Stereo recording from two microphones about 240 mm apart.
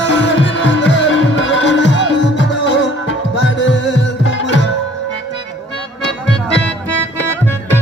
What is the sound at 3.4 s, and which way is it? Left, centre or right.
Tabla, left.